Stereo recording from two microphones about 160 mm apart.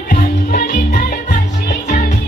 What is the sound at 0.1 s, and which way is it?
Music, 65° left (ahead or behind).